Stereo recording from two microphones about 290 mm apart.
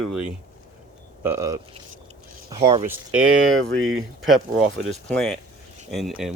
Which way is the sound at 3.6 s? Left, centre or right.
Centre.